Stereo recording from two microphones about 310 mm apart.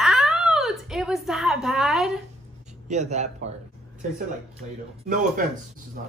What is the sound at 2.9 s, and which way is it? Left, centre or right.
Speech, right.